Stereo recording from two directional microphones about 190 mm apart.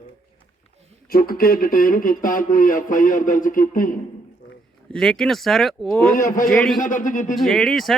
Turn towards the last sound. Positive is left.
turn(degrees=0)  # may be behind; listen again after turning